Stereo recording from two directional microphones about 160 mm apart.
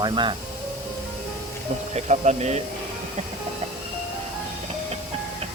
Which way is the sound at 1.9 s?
45° right (ahead or behind).